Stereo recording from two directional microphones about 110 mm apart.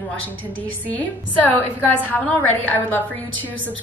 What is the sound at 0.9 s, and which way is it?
A woman's voice, 15° left (ahead or behind).